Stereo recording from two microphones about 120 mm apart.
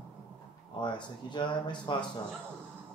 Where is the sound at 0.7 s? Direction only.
40° left (ahead or behind).